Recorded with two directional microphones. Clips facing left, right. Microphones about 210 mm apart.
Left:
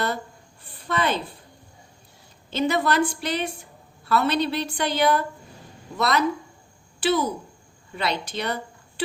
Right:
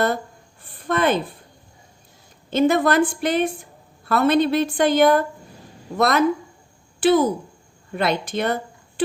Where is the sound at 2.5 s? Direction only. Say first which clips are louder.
Right 5 dB; 50° right (ahead or behind).